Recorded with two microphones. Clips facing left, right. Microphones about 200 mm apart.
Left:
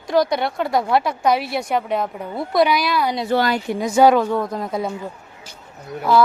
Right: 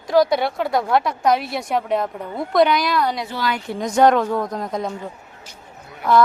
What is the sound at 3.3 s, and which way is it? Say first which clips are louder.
Speech: left 6 dB; 55° left (ahead or behind).